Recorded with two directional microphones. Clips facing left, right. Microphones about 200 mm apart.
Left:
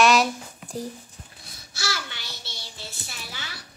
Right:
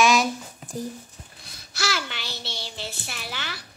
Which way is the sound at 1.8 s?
90° right.